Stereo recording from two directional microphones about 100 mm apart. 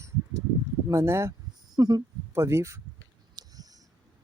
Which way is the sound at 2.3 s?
30° right (ahead or behind).